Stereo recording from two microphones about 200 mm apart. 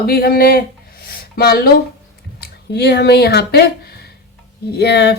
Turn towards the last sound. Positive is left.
turn(degrees=55)  # may be behind; listen again after turning